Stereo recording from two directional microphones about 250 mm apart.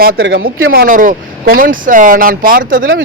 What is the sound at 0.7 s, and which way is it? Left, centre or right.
A man's voice, right.